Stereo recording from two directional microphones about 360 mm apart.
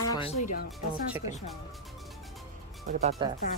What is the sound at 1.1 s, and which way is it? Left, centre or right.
Speech, centre.